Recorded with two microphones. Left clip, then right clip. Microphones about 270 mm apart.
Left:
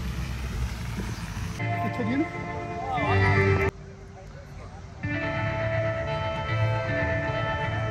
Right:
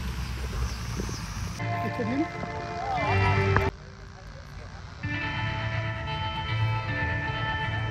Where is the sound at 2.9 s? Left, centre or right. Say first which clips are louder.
Left 2 dB; right.